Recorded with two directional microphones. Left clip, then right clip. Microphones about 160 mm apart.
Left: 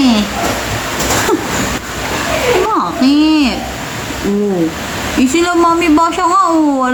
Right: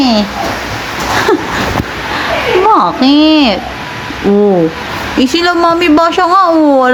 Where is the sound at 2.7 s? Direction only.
35° right (ahead or behind).